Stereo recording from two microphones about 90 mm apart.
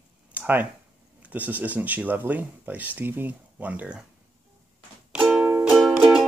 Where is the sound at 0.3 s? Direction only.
20° right (ahead or behind).